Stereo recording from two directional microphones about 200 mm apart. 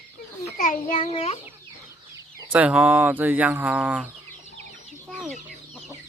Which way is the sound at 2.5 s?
5° right (ahead or behind).